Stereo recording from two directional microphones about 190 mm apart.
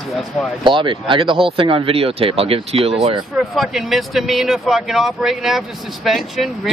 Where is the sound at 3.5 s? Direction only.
Centre (ahead or behind).